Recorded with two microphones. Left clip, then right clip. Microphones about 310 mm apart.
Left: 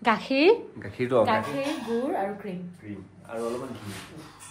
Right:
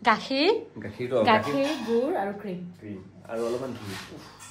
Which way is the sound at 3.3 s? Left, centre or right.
Centre.